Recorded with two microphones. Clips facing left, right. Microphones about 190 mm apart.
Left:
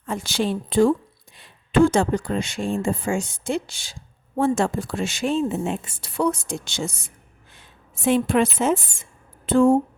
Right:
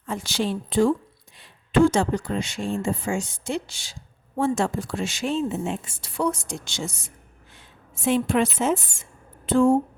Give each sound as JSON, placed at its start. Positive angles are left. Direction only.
{"t": 0.1, "sound": "speech", "side_deg": 55}
{"t": 8.0, "sound": "a woman's voice", "side_deg": 55}